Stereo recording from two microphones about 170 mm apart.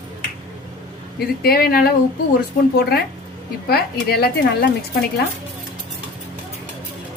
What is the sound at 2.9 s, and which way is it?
A woman's voice, 65° left (ahead or behind).